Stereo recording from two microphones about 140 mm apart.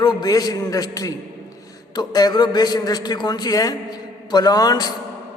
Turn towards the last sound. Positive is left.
turn(degrees=30)  # may be behind; listen again after turning